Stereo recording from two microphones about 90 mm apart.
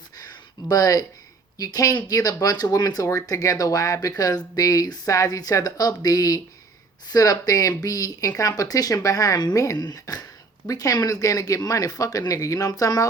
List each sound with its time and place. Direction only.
0.7 s speech: 45° left (ahead or behind)